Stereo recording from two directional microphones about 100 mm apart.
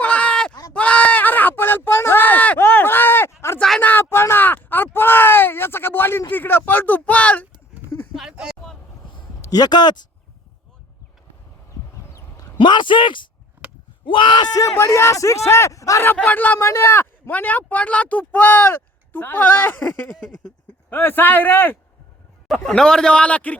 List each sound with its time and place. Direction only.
0.0 s a sound: 15° left (ahead or behind)
8.1 s a sound: 5° right (ahead or behind)
9.4 s speech: 40° left (ahead or behind)
12.5 s speech: 50° left (ahead or behind)
13.6 s a sound: 15° right (ahead or behind)
14.0 s speech: 55° left (ahead or behind)
14.6 s speech: 30° left (ahead or behind)
16.1 s a man's voice: 15° left (ahead or behind)
22.4 s a man's voice: 5° left (ahead or behind)